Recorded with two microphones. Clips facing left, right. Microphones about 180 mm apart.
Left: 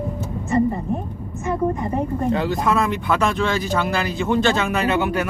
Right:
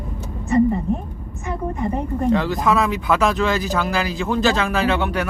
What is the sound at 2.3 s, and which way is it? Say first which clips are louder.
Speech: right 3 dB; centre (ahead or behind).